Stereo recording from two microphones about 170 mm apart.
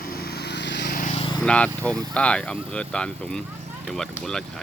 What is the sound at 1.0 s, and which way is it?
Vehicle, 40° left (ahead or behind).